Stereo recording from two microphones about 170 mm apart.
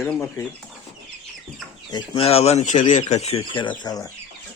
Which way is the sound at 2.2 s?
35° left (ahead or behind).